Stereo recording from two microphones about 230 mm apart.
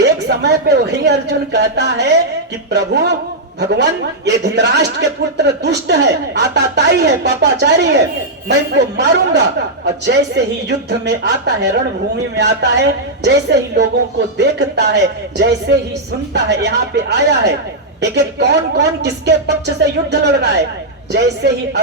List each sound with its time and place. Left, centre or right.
0.0 s a man's voice: right